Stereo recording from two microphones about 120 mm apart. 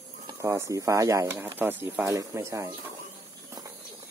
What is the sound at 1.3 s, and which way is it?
Speech, 15° right (ahead or behind).